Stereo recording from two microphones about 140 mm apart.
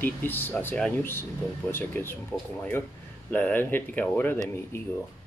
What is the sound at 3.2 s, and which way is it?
Speech, 10° left (ahead or behind).